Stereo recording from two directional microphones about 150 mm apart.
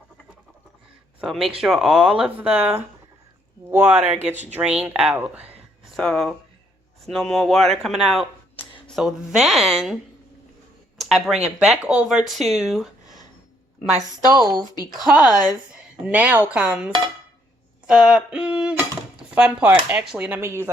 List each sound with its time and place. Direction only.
1.2 s speech: centre (ahead or behind)
6.0 s speech: 5° left (ahead or behind)
10.9 s a sound: centre (ahead or behind)
11.6 s speech: 5° right (ahead or behind)
15.0 s speech: 5° right (ahead or behind)
15.3 s speech: 25° left (ahead or behind)
15.7 s a woman's voice: 10° right (ahead or behind)
17.8 s a sound: 5° right (ahead or behind)
19.3 s speech: 10° right (ahead or behind)